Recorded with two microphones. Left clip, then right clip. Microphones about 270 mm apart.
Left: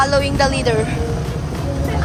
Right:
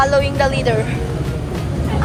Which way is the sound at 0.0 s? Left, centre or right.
Centre.